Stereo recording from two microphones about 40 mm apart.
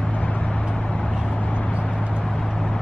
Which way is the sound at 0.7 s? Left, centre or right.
Centre.